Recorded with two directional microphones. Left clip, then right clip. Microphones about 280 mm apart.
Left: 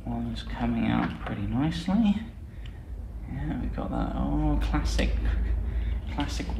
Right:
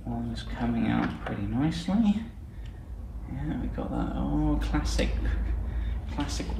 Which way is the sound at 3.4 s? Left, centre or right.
Left.